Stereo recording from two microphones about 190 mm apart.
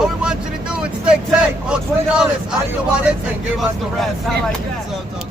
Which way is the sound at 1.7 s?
5° right (ahead or behind).